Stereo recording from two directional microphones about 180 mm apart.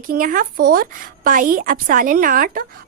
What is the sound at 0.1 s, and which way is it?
A woman's voice, 50° right (ahead or behind).